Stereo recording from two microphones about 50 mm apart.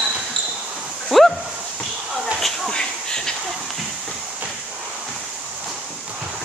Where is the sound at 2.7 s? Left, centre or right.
Centre.